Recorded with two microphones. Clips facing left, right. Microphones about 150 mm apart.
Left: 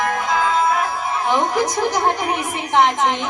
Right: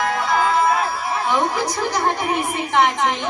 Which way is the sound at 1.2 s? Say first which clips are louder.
Left 2 dB; 20° left (ahead or behind).